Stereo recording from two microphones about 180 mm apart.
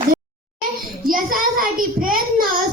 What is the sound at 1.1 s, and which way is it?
Child singing, 50° right (ahead or behind).